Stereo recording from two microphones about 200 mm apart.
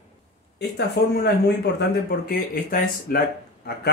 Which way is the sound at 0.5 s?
55° left (ahead or behind).